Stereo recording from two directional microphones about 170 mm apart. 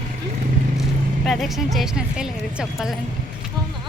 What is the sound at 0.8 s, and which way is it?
Speech, centre (ahead or behind).